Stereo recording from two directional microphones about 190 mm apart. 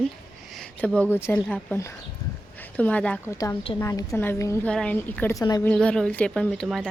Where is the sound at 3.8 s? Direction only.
20° left (ahead or behind).